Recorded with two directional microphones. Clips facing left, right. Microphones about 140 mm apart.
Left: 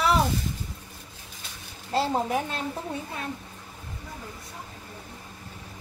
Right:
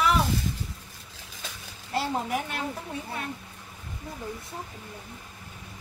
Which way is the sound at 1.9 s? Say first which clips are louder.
Left 3 dB; 25° left (ahead or behind).